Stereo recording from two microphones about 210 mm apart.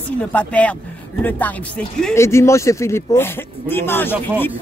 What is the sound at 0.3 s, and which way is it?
Speech, 5° left (ahead or behind).